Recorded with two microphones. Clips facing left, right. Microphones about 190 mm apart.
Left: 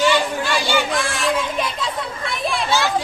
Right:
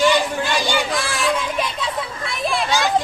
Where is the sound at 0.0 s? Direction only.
15° right (ahead or behind).